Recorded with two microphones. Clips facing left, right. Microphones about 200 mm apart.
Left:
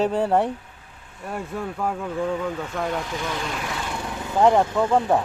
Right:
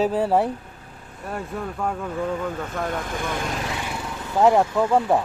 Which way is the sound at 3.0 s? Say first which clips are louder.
Right 1 dB; 50° right (ahead or behind).